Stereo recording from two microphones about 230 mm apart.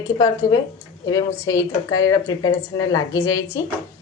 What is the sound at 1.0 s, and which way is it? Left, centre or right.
Speech, centre.